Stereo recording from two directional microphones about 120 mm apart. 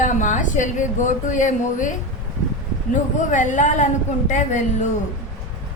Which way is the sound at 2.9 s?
90° left.